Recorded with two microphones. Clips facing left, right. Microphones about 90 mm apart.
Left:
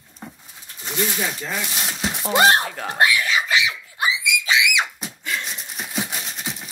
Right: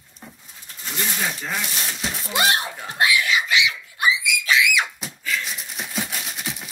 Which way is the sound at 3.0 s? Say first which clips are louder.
Left 1 dB; 40° left (ahead or behind).